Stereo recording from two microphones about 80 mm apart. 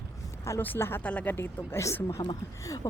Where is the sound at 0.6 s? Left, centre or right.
Left.